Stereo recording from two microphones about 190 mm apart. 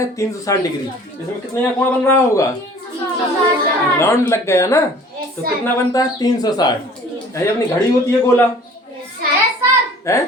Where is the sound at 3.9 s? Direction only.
15° left (ahead or behind).